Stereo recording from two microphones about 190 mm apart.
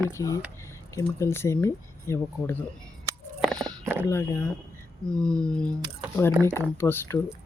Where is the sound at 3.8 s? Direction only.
10° right (ahead or behind).